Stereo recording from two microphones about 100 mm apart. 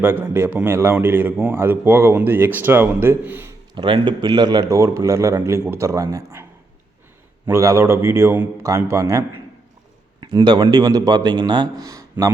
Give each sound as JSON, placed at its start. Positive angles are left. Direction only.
{"t": 0.0, "sound": "a man's voice", "side_deg": -20}
{"t": 3.8, "sound": "a man's voice", "side_deg": -50}
{"t": 7.4, "sound": "a man's voice", "side_deg": -30}
{"t": 10.2, "sound": "a man's voice", "side_deg": -45}